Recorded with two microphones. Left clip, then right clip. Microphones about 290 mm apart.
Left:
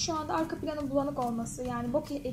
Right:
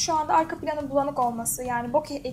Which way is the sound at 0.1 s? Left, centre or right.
Right.